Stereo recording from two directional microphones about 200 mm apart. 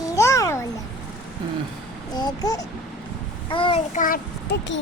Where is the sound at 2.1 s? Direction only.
20° left (ahead or behind).